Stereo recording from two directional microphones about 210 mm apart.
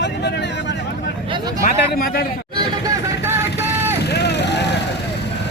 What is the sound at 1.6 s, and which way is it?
Speech, 45° left (ahead or behind).